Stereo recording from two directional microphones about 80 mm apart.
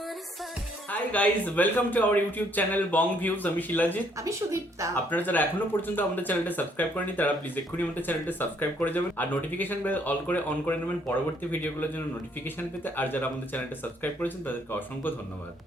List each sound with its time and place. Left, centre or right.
0.9 s speech: centre
4.2 s speech: right
5.1 s speech: left